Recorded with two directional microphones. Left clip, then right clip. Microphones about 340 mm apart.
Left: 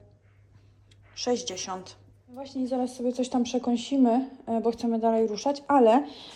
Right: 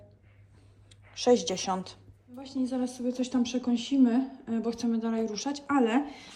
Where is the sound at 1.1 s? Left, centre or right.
Centre.